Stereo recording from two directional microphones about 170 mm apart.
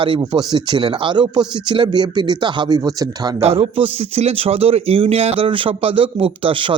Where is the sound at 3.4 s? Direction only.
35° right (ahead or behind).